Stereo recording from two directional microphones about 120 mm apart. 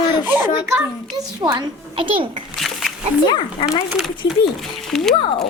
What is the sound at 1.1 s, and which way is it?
A child's voice, 30° right (ahead or behind).